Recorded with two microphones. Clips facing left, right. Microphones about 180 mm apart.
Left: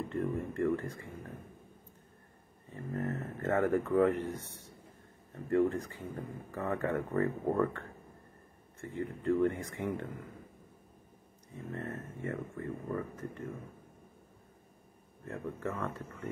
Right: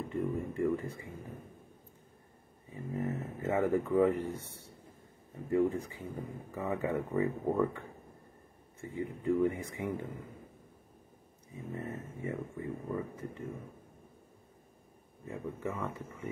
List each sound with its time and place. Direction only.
0.1 s speech: 10° right (ahead or behind)
2.7 s speech: 10° right (ahead or behind)
8.8 s speech: 15° right (ahead or behind)
11.5 s speech: 10° right (ahead or behind)
15.2 s speech: 10° right (ahead or behind)